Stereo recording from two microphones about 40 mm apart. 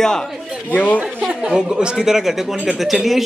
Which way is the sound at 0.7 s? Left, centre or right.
Left.